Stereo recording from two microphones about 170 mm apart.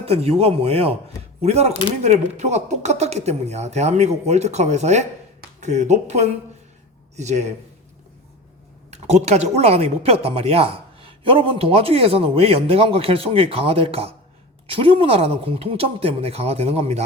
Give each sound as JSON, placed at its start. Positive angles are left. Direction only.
{"t": 0.0, "sound": "a man's voice", "side_deg": -35}
{"t": 8.9, "sound": "speech", "side_deg": -40}